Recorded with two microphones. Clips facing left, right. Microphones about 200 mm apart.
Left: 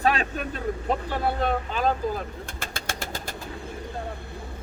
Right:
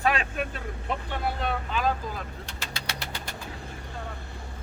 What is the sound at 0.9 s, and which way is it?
Speech, 40° left (ahead or behind).